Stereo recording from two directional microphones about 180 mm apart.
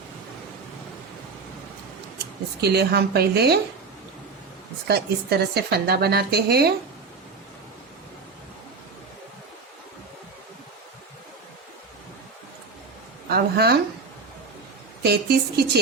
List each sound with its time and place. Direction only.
2.6 s a woman's voice: 65° right (ahead or behind)
4.9 s a woman's voice: 65° right (ahead or behind)
13.3 s a woman's voice: 60° right (ahead or behind)
15.0 s a woman's voice: 60° right (ahead or behind)